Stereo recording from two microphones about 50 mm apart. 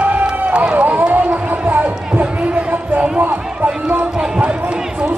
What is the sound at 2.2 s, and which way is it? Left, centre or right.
Basketball bounce, right.